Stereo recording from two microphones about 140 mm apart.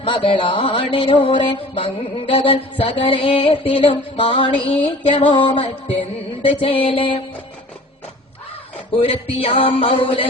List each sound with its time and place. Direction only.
0.0 s music: 35° left (ahead or behind)
9.0 s music: 45° left (ahead or behind)